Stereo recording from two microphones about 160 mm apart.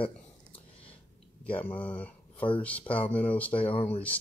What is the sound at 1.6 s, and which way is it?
Speech, 10° left (ahead or behind).